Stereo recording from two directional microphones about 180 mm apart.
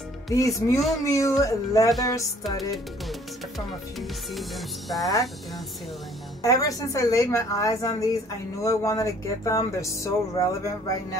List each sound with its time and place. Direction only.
0.3 s a woman's voice: 20° left (ahead or behind)
0.7 s speech: centre (ahead or behind)
1.0 s a woman's voice: 15° left (ahead or behind)
4.3 s speech: centre (ahead or behind)
6.4 s a woman's voice: 20° left (ahead or behind)